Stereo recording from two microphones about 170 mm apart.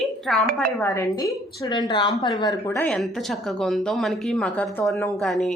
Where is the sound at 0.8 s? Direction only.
15° left (ahead or behind).